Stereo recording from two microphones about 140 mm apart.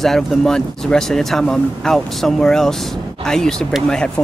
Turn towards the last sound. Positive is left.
turn(degrees=5)  # may be behind; listen again after turning